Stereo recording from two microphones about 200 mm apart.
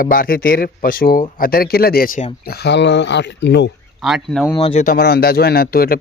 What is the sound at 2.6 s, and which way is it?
A man's voice, 60° left (ahead or behind).